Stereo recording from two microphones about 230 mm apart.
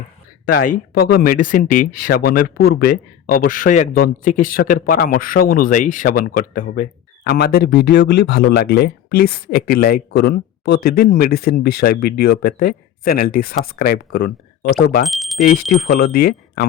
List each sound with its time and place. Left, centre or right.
0.5 s speech: left
15.0 s bicycle bell: centre
15.4 s speech: left
15.9 s speech: left